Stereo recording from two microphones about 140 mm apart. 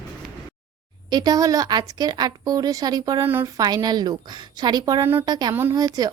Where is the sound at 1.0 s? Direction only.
30° right (ahead or behind).